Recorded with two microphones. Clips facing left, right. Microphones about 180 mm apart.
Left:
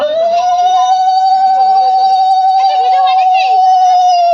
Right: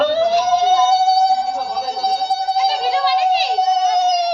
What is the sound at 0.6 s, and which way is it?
Music, 45° left (ahead or behind).